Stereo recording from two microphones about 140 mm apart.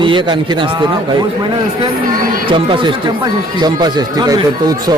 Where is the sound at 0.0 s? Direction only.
35° right (ahead or behind).